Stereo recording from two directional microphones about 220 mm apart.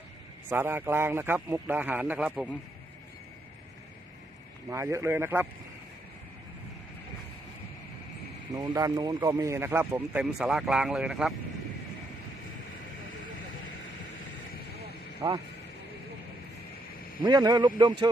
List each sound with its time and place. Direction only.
0.5 s speech: 10° right (ahead or behind)
4.7 s speech: 10° right (ahead or behind)
8.5 s speech: 15° right (ahead or behind)
15.2 s speech: 15° right (ahead or behind)
17.2 s a man's voice: 20° right (ahead or behind)